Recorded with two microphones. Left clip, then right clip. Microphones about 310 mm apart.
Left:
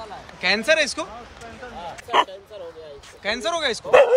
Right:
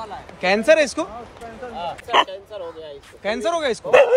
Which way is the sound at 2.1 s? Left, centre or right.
Centre.